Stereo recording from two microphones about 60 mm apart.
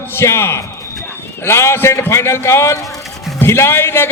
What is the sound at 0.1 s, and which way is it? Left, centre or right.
A man's voice, left.